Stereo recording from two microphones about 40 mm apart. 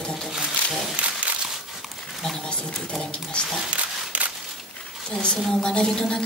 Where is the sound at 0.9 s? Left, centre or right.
Right.